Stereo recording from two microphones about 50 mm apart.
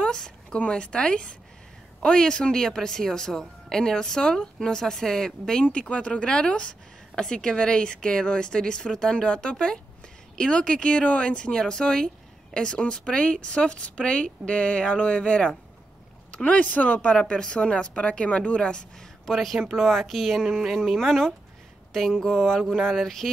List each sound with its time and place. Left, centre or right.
0.0 s speech: centre; by 17.1 s left
17.1 s speech: centre
19.2 s speech: centre
20.4 s speech: centre